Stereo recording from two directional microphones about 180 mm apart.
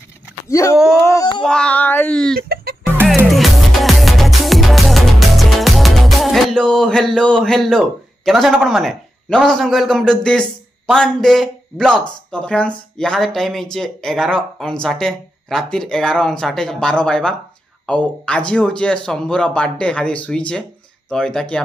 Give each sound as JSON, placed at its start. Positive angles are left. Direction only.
{"t": 0.5, "sound": "speech", "side_deg": 15}
{"t": 1.1, "sound": "a sound", "side_deg": 25}
{"t": 1.4, "sound": "speech", "side_deg": 5}
{"t": 2.4, "sound": "music", "side_deg": -60}
{"t": 3.3, "sound": "music", "side_deg": 0}
{"t": 10.9, "sound": "speech", "side_deg": 5}